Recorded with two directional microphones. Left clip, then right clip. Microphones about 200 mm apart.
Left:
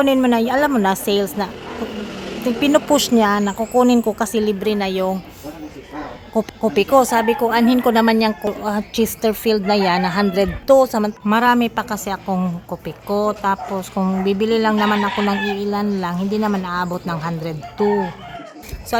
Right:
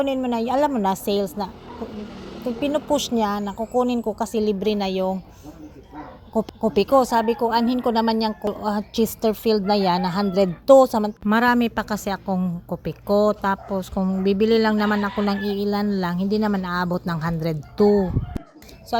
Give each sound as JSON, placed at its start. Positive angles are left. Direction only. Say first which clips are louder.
{"t": 0.0, "sound": "speech", "louder": "left 7 dB", "side_deg": 0}
{"t": 2.6, "sound": "speech", "louder": "left 7 dB", "side_deg": 5}
{"t": 4.6, "sound": "a woman's voice", "louder": "left 3 dB", "side_deg": -10}
{"t": 6.3, "sound": "a woman's voice", "louder": "left 3 dB", "side_deg": -5}